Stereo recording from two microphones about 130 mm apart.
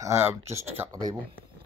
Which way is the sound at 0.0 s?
20° right (ahead or behind).